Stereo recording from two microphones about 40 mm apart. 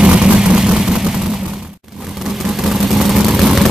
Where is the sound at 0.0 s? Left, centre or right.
Right.